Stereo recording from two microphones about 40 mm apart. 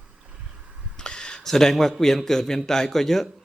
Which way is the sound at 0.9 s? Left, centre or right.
Centre.